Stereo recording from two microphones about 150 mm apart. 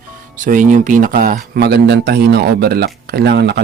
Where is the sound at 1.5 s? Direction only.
90° right.